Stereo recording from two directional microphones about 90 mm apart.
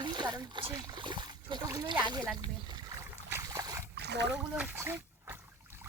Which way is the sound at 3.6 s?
40° right (ahead or behind).